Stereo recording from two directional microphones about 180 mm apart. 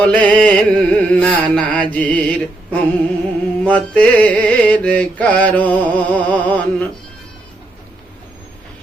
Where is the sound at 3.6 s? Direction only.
10° left (ahead or behind).